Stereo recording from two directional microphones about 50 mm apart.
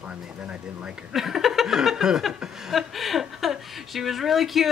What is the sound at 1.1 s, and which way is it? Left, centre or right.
Speech, centre.